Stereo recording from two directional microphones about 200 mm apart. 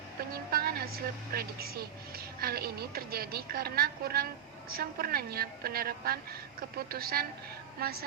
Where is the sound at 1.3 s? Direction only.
50° right (ahead or behind).